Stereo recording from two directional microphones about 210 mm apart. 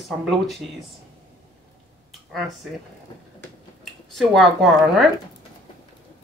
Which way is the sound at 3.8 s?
Centre (ahead or behind).